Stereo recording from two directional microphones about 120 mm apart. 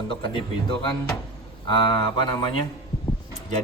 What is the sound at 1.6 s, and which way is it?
Speech, 40° left (ahead or behind).